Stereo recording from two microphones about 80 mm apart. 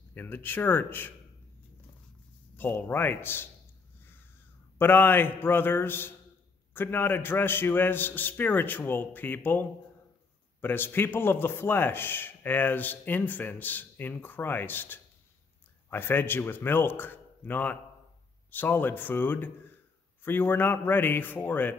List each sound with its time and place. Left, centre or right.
0.1 s a man's voice: left
2.5 s a man's voice: left
4.0 s crow: left
4.7 s a man's voice: left